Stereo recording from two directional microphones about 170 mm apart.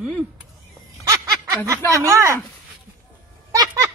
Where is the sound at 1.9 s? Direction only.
20° right (ahead or behind).